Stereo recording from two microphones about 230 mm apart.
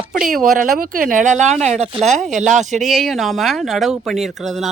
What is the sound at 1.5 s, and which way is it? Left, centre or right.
Speech, centre.